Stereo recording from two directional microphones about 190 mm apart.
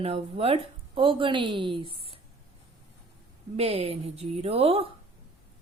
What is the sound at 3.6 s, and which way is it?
Speech, 30° right (ahead or behind).